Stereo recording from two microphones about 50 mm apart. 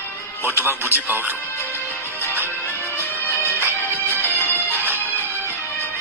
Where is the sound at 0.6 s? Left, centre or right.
Right.